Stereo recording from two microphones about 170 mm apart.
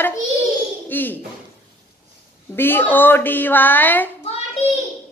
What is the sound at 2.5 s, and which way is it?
A woman's voice, 10° left (ahead or behind).